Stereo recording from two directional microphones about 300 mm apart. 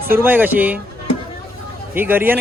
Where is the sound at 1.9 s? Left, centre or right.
Centre.